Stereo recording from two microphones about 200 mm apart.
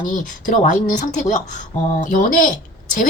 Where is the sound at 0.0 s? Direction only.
40° left (ahead or behind).